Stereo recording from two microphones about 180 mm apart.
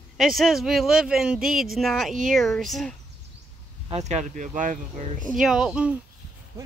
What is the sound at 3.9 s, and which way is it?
Speech, 40° right (ahead or behind).